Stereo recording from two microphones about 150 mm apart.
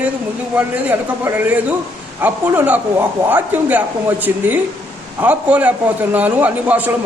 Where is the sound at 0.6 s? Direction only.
10° right (ahead or behind).